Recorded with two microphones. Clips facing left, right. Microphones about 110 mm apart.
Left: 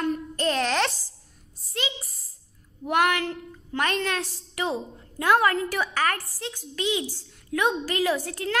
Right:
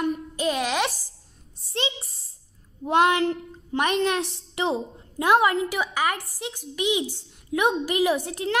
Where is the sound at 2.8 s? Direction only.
25° right (ahead or behind).